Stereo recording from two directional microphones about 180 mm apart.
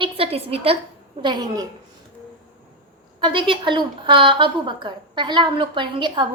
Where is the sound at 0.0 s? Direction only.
35° right (ahead or behind).